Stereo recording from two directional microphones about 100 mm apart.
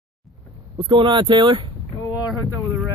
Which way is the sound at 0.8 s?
55° right (ahead or behind).